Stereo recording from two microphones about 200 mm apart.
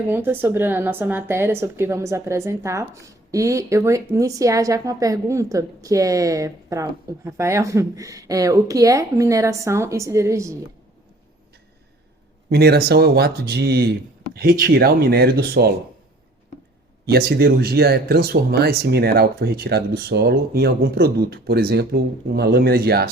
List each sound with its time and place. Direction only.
0.1 s a woman's voice: 10° right (ahead or behind)
12.5 s speech: 50° right (ahead or behind)
17.1 s speech: 50° right (ahead or behind)